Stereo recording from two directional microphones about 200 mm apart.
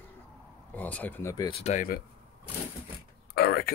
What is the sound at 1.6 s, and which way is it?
Speech, 40° left (ahead or behind).